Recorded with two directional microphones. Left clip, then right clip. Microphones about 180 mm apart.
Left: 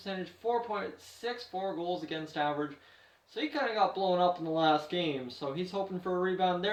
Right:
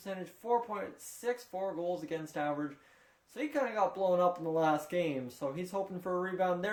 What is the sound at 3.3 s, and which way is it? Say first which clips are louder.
Speech: left 2 dB; 50° right (ahead or behind).